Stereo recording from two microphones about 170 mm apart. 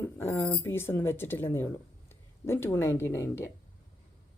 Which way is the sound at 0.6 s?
15° left (ahead or behind).